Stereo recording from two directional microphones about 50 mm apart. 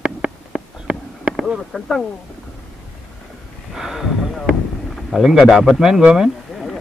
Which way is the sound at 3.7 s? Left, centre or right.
Centre.